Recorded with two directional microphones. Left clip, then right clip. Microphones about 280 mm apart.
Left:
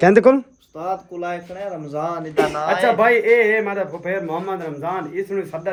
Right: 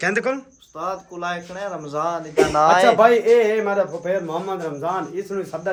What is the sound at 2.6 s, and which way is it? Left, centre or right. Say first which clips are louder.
Speech: right 5 dB; right.